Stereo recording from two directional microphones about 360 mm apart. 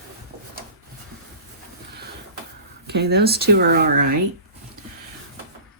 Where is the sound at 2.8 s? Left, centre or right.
Right.